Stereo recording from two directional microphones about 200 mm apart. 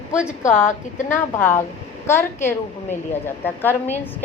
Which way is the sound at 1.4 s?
10° left (ahead or behind).